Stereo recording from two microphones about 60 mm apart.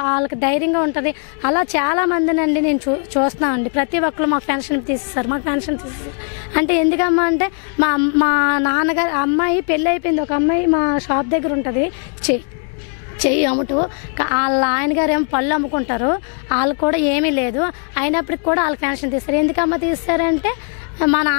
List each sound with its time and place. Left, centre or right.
0.0 s a woman's voice: left